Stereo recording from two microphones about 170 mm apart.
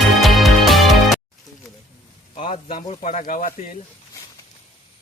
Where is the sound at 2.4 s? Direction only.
50° left (ahead or behind).